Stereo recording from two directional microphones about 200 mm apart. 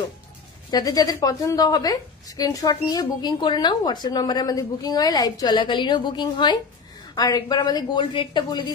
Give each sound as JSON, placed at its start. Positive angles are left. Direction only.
{"t": 0.7, "sound": "a woman's voice", "side_deg": 20}